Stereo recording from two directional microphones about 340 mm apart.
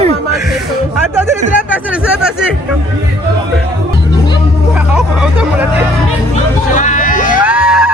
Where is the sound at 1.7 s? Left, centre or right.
Centre.